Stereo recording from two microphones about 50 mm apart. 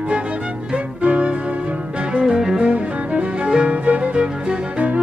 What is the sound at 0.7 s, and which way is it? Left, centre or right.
Music, right.